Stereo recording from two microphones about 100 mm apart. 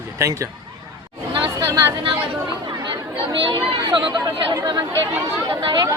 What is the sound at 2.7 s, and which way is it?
Chatter, 45° right (ahead or behind).